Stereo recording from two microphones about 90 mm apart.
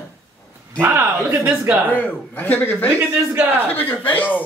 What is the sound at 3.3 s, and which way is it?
Speech, 20° right (ahead or behind).